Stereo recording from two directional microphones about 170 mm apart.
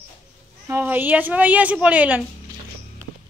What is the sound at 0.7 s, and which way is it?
A woman's voice, 10° right (ahead or behind).